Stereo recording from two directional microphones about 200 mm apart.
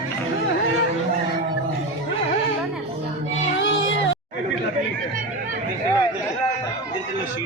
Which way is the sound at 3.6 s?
70° left (ahead or behind).